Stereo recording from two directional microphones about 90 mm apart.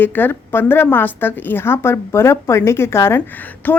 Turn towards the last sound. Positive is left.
turn(degrees=20)  # may be behind; listen again after turning